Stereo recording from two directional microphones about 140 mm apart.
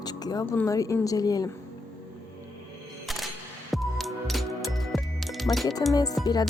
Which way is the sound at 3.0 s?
Centre (ahead or behind).